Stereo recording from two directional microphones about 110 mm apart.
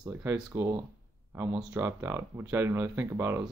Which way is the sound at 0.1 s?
20° right (ahead or behind).